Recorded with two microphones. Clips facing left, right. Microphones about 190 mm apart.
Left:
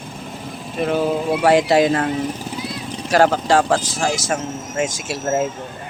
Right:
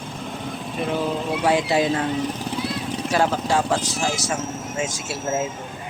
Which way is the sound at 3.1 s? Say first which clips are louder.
Left 6 dB; 90° left.